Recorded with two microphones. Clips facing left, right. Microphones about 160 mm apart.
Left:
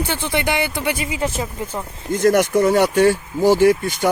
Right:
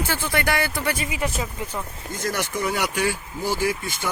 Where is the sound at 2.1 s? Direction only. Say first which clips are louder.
Left 12 dB; 55° left (ahead or behind).